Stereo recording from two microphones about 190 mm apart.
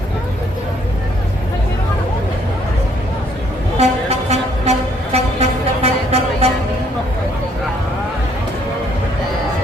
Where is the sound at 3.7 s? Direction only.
35° right (ahead or behind).